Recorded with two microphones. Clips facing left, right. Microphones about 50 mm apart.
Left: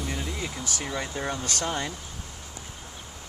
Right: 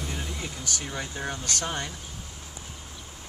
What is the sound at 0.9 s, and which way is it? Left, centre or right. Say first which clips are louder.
Speech: left 5 dB; left.